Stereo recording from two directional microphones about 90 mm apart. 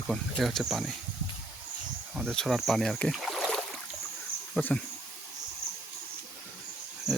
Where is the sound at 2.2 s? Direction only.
5° left (ahead or behind).